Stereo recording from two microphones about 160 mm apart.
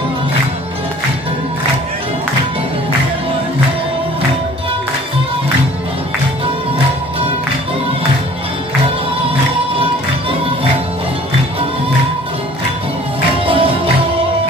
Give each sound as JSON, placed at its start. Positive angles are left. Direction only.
{"t": 13.5, "sound": "music", "side_deg": -35}